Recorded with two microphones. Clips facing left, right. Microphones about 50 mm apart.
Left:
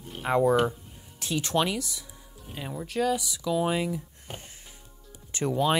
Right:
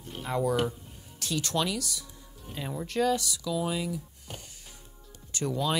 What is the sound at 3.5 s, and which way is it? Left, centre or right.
Speech, left.